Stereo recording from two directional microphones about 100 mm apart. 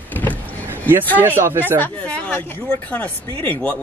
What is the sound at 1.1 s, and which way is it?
Speech, 20° right (ahead or behind).